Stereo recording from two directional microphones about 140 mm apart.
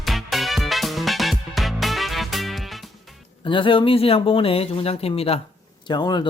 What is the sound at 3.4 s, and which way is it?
Speech, 40° left (ahead or behind).